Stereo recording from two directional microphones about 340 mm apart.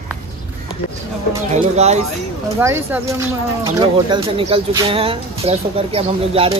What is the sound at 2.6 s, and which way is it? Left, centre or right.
Speech, centre.